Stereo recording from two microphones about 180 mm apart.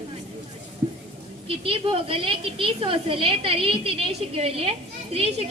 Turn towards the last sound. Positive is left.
turn(degrees=-35)  # may be behind; listen again after turning